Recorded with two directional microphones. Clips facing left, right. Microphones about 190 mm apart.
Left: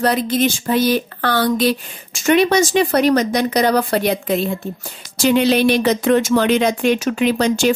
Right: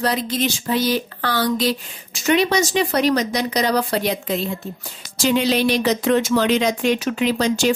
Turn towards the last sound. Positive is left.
turn(degrees=55)  # may be behind; listen again after turning